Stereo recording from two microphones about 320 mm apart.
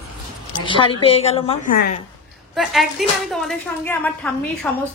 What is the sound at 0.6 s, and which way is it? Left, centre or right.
A woman's voice, centre.